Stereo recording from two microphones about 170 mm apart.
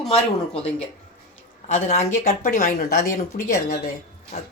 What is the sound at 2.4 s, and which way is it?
Speech, 55° left (ahead or behind).